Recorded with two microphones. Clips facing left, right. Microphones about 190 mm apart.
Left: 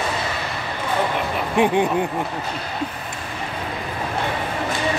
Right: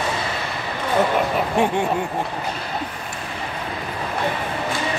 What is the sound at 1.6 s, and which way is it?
Speech, 15° left (ahead or behind).